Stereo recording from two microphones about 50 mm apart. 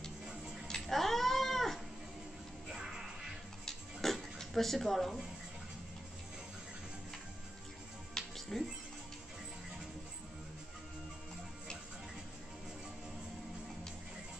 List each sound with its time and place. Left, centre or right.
0.7 s cat: centre
2.7 s music: centre
3.6 s a sound: centre
8.4 s music: centre